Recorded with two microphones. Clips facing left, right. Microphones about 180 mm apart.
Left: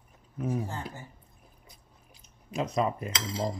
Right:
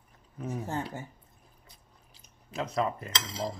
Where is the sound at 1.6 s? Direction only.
15° left (ahead or behind).